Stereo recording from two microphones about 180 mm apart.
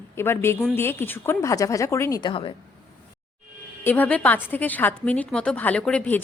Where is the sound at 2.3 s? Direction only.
30° left (ahead or behind).